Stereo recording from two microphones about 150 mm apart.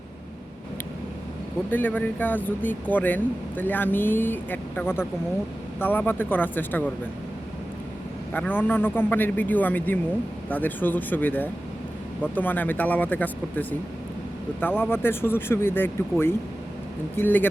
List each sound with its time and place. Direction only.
1.7 s speech: 10° left (ahead or behind)
8.3 s speech: 10° left (ahead or behind)
14.8 s speech: 15° left (ahead or behind)